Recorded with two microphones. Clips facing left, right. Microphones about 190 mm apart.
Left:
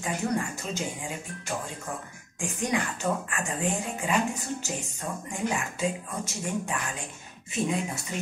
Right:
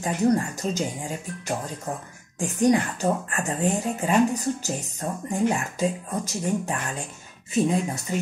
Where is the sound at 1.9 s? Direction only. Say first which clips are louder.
Right 4 dB; 35° right (ahead or behind).